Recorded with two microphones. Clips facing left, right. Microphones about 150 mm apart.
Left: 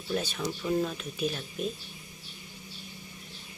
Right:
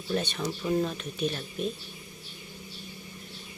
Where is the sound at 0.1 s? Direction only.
Centre (ahead or behind).